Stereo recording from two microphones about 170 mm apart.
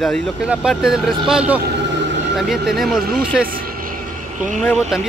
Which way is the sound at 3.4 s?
55° right (ahead or behind).